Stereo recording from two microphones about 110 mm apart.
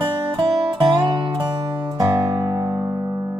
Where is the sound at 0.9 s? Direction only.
35° right (ahead or behind).